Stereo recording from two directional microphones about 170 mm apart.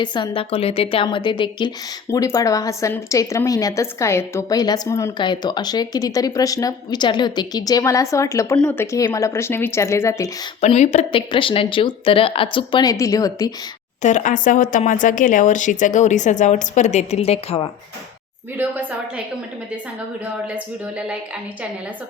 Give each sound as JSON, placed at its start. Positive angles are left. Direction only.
{"t": 0.0, "sound": "a woman's voice", "side_deg": 25}
{"t": 10.6, "sound": "speech", "side_deg": 40}
{"t": 14.0, "sound": "a woman's voice", "side_deg": 45}
{"t": 18.5, "sound": "a woman's voice", "side_deg": -10}